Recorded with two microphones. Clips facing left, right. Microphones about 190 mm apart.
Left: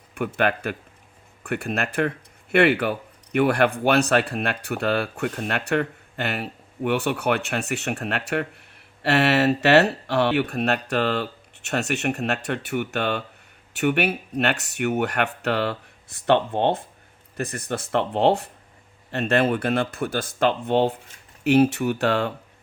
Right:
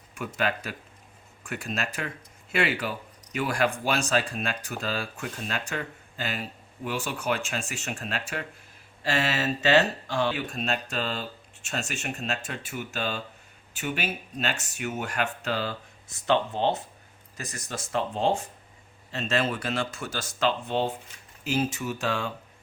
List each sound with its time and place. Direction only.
0.3 s speech: 60° left (ahead or behind)